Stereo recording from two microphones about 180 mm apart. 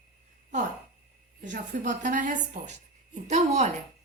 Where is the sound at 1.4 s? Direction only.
50° right (ahead or behind).